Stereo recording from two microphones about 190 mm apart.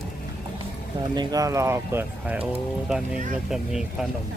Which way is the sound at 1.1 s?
20° right (ahead or behind).